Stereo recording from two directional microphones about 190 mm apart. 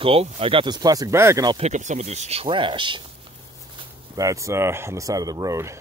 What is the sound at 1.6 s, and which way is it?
Speech, 40° right (ahead or behind).